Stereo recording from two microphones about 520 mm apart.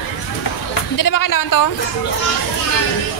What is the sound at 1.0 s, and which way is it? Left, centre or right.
Speech, left.